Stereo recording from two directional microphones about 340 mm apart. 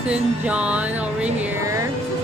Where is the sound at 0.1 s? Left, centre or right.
Centre.